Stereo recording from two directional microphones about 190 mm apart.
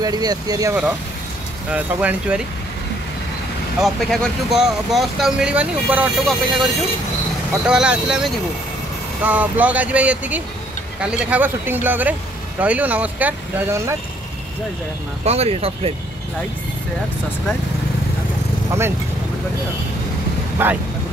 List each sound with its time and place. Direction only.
0.0 s speech: 20° right (ahead or behind)
1.7 s speech: 5° right (ahead or behind)
3.8 s speech: centre (ahead or behind)
15.2 s speech: 35° right (ahead or behind)
20.6 s speech: 10° right (ahead or behind)